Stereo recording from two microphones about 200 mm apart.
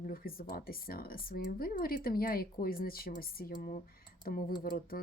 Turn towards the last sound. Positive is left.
turn(degrees=45)  # may be behind; listen again after turning